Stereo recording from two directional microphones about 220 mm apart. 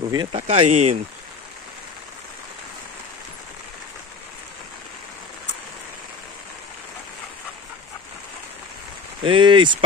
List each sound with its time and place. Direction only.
0.1 s speech: 25° right (ahead or behind)
0.7 s speech: 90° right
9.2 s speech: 20° right (ahead or behind)